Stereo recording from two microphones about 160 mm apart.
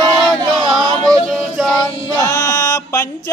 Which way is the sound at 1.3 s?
5° left (ahead or behind).